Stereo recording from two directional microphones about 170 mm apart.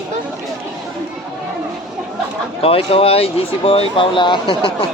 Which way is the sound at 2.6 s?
35° left (ahead or behind).